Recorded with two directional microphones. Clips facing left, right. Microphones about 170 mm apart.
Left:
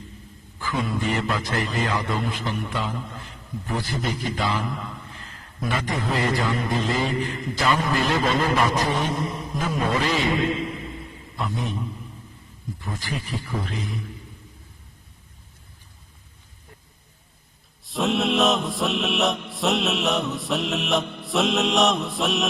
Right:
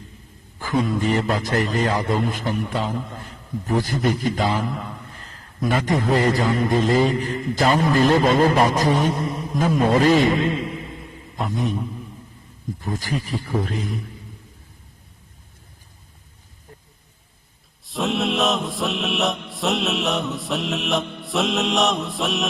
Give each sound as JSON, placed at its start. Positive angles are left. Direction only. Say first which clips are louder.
{"t": 0.6, "sound": "a man's voice", "louder": "right 5 dB", "side_deg": -45}
{"t": 11.3, "sound": "a man's voice", "louder": "right 3 dB", "side_deg": -45}
{"t": 12.8, "sound": "a man's voice", "louder": "right 5 dB", "side_deg": -40}
{"t": 17.8, "sound": "mantra", "louder": "even", "side_deg": 0}